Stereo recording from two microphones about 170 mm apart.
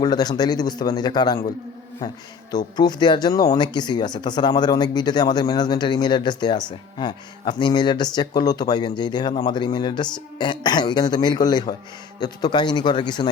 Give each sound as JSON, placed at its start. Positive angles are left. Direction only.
{"t": 0.0, "sound": "speech", "side_deg": 25}
{"t": 2.5, "sound": "speech", "side_deg": 25}